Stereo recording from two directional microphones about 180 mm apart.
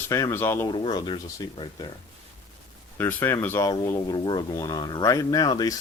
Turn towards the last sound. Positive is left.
turn(degrees=20)  # may be behind; listen again after turning